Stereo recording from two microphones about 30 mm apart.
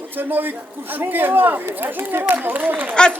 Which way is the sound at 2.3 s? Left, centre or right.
Right.